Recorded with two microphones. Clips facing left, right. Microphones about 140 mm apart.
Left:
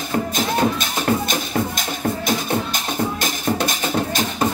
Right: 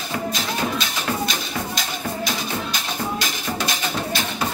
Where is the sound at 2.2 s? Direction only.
50° left (ahead or behind).